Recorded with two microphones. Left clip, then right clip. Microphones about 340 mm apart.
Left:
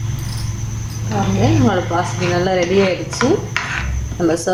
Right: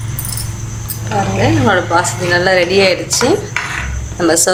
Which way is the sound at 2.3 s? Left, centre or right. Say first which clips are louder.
Right 7 dB; right.